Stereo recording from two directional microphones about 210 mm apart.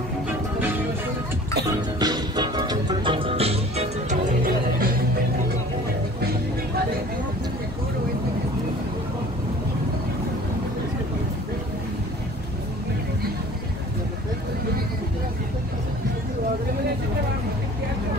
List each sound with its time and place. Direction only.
2.0 s music: 20° right (ahead or behind); by 4.9 s 40° right (ahead or behind)